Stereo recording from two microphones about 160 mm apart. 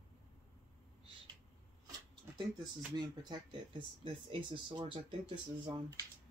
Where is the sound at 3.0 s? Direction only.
25° right (ahead or behind).